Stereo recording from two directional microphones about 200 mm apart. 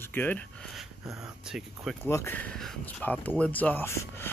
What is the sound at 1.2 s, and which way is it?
Speech, 5° right (ahead or behind).